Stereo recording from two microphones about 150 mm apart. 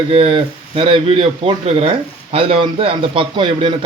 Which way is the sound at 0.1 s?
40° right (ahead or behind).